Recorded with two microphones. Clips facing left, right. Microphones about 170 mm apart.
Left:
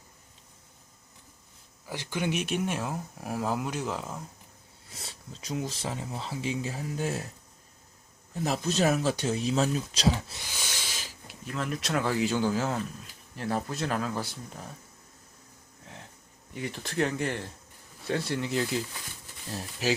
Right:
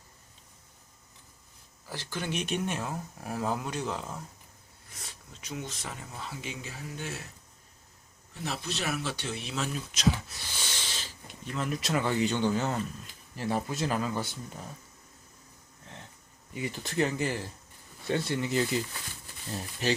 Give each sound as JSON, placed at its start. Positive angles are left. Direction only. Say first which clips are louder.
{"t": 1.9, "sound": "speech", "louder": "left 4 dB", "side_deg": 15}
{"t": 4.9, "sound": "speech", "louder": "left 4 dB", "side_deg": 30}
{"t": 8.4, "sound": "speech", "louder": "left 8 dB", "side_deg": 40}
{"t": 10.5, "sound": "speech", "louder": "even", "side_deg": 10}
{"t": 16.6, "sound": "speech", "louder": "even", "side_deg": 0}